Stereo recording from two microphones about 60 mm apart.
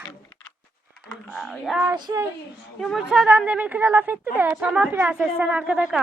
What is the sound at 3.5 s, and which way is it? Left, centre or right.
A woman's voice, right.